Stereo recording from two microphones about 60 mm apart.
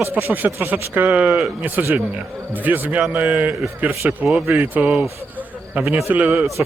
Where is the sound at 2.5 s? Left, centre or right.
Right.